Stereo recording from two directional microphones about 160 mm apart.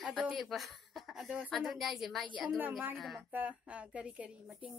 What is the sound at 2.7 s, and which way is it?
Speech, 10° right (ahead or behind).